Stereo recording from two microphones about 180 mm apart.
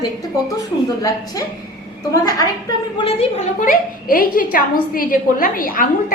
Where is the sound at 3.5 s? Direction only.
50° left (ahead or behind).